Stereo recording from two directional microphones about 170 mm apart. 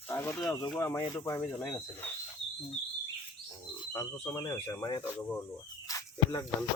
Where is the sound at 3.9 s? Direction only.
20° left (ahead or behind).